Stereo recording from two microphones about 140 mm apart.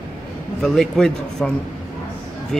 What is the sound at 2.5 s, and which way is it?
Speech, centre (ahead or behind).